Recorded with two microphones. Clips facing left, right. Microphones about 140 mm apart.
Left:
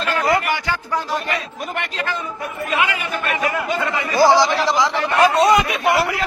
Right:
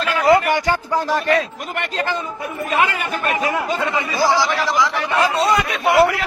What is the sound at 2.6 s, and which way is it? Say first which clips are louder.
Speech: right 2 dB; 40° right (ahead or behind).